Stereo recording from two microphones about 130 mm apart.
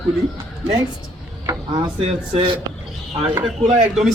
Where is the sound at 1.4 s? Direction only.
30° right (ahead or behind).